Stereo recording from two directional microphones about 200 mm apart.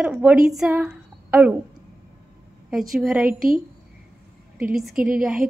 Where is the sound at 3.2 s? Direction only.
45° right (ahead or behind).